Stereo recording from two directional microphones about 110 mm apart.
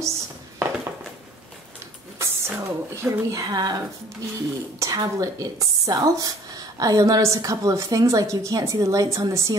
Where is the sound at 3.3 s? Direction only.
35° right (ahead or behind).